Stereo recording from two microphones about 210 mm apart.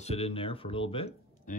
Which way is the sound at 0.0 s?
30° left (ahead or behind).